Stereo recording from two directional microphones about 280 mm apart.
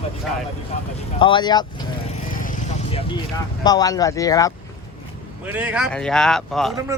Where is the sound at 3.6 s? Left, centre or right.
Centre.